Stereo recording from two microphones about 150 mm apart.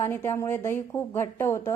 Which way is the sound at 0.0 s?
15° left (ahead or behind).